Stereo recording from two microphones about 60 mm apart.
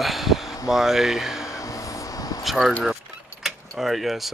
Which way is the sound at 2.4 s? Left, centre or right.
Centre.